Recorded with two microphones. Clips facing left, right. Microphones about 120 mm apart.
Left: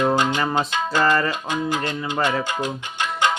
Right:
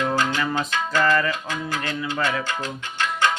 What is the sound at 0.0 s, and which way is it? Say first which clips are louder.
Music: left 3 dB; 20° left (ahead or behind).